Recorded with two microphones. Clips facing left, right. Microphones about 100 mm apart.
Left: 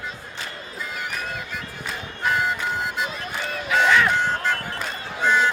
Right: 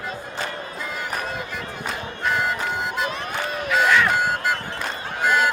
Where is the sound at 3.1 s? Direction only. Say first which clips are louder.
Right 3 dB; 55° right (ahead or behind).